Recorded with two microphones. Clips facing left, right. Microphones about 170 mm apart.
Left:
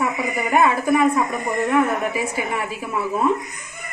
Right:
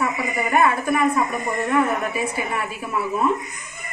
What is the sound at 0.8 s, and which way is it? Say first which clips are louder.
A woman's voice: left 2 dB; 15° left (ahead or behind).